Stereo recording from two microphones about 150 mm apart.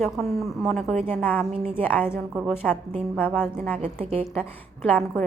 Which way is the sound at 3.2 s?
10° left (ahead or behind).